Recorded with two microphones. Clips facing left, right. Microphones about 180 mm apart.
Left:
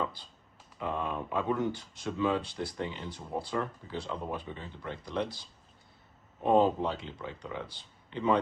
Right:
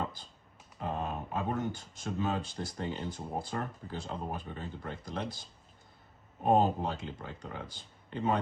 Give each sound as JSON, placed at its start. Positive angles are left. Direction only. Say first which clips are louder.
{"t": 0.9, "sound": "typing", "louder": "left 1 dB", "side_deg": -40}
{"t": 1.5, "sound": "speech", "louder": "left 3 dB", "side_deg": -45}